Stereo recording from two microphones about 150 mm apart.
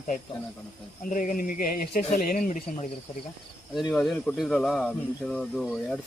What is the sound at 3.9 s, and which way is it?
Speech, 5° left (ahead or behind).